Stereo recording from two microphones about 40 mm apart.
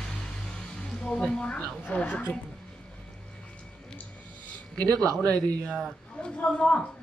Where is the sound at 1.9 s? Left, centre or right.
Left.